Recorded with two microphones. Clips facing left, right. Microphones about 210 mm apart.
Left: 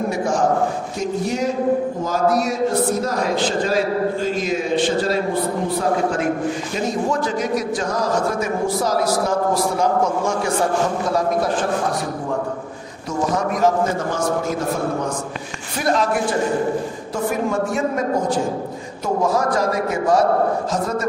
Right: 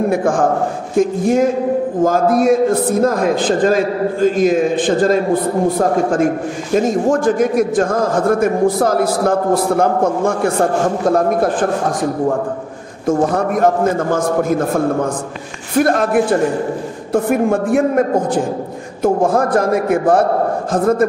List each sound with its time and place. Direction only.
0.1 s a man's voice: 55° right (ahead or behind)
13.0 s a man's voice: 55° right (ahead or behind)